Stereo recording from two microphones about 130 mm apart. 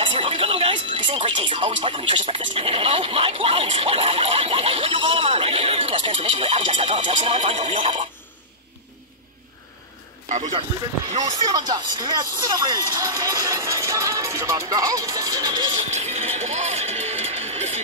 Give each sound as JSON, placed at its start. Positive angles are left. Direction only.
{"t": 0.0, "sound": "music", "side_deg": -40}
{"t": 7.1, "sound": "speech", "side_deg": -45}
{"t": 11.2, "sound": "speech", "side_deg": -30}
{"t": 15.9, "sound": "music", "side_deg": -55}